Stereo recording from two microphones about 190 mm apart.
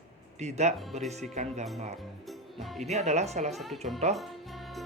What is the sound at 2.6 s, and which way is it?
Speech, centre (ahead or behind).